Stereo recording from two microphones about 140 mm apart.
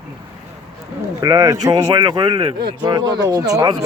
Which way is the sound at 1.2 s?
25° right (ahead or behind).